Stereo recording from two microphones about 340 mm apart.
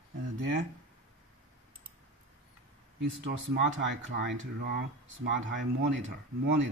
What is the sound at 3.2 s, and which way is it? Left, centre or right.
Speech, right.